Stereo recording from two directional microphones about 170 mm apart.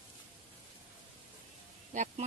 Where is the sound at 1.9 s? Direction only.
45° right (ahead or behind).